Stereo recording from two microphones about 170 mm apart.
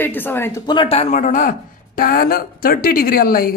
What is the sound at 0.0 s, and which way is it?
Speech, 10° left (ahead or behind).